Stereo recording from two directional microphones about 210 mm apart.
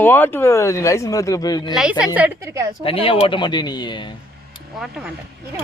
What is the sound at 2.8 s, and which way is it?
Speech, 25° left (ahead or behind).